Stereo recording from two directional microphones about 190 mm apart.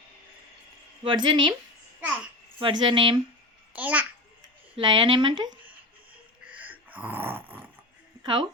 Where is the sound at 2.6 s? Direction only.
25° right (ahead or behind).